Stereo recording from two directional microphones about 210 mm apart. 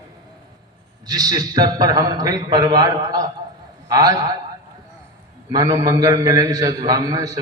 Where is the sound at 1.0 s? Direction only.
20° right (ahead or behind).